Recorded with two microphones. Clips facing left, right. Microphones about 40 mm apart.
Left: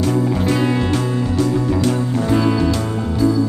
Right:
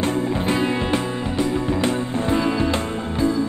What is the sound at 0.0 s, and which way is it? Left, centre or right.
Music, right.